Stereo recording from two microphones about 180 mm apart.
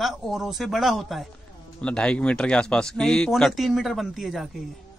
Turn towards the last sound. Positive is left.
turn(degrees=0)  # may be behind; listen again after turning